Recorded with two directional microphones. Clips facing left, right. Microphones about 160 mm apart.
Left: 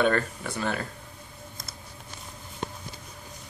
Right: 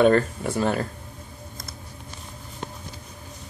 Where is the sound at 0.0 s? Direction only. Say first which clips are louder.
Right 7 dB; 35° right (ahead or behind).